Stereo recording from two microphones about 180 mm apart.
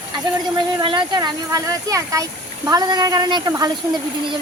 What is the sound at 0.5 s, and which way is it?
Speech, 25° right (ahead or behind).